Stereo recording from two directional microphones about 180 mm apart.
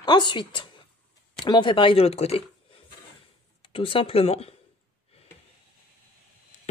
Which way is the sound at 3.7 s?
30° left (ahead or behind).